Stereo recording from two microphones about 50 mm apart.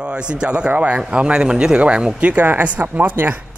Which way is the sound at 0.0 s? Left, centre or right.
Centre.